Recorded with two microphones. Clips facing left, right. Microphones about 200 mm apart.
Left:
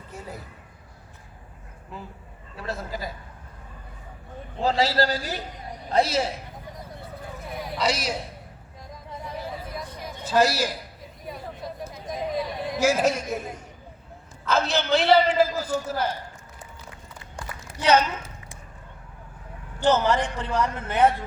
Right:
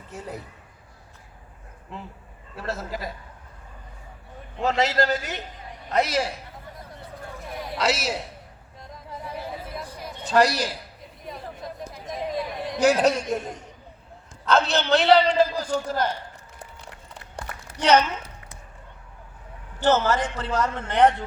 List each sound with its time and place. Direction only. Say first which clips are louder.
0.1 s a man's voice: right 3 dB; centre (ahead or behind)
2.6 s a man's voice: right 1 dB; centre (ahead or behind)
4.5 s a man's voice: even; 30° left (ahead or behind)
7.5 s a sound: right 1 dB; centre (ahead or behind)
8.9 s chatter: even; 5° right (ahead or behind)
10.0 s a sound: right 1 dB; centre (ahead or behind)
14.4 s a man's voice: right 2 dB; centre (ahead or behind)
19.8 s a man's voice: even; 15° left (ahead or behind)